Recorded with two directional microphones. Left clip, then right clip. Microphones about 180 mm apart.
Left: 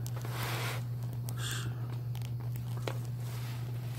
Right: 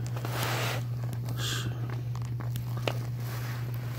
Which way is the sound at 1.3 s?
75° right (ahead or behind).